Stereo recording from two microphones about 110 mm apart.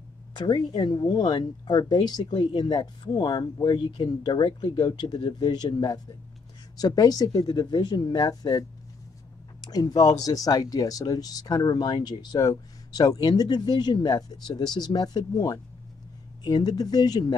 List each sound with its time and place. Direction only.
0.3 s speech: 40° left (ahead or behind)